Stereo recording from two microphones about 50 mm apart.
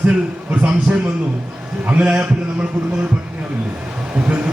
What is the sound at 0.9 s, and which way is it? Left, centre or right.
A man's voice, right.